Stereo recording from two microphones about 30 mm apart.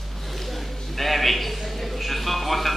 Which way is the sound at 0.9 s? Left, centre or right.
Centre.